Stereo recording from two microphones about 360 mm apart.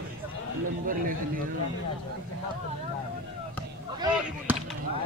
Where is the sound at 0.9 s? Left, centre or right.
Right.